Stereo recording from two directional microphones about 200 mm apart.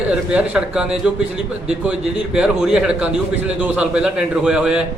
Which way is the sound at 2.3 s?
5° right (ahead or behind).